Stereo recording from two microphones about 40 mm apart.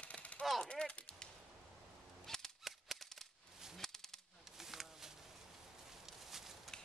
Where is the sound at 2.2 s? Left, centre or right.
Centre.